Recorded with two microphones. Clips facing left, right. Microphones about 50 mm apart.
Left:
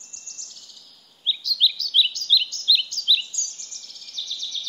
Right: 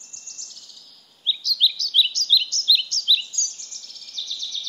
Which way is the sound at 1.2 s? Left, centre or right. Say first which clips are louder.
Even; centre.